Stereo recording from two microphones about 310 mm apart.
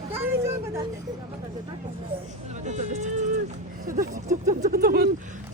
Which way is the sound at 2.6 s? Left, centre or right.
Right.